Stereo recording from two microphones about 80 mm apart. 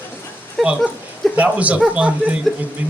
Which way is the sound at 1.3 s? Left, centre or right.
Centre.